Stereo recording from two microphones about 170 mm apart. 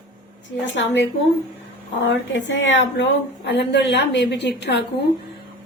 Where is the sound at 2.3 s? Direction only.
90° left.